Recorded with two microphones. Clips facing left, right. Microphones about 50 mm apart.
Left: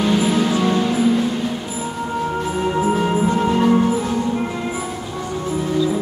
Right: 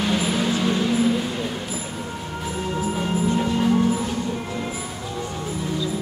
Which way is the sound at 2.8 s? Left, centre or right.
Left.